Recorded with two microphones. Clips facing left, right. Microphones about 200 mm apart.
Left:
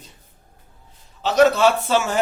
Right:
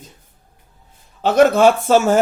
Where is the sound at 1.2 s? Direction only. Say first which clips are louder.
Right 4 dB; 50° right (ahead or behind).